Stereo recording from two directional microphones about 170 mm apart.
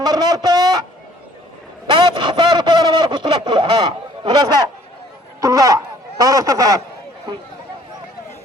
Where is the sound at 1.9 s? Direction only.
25° right (ahead or behind).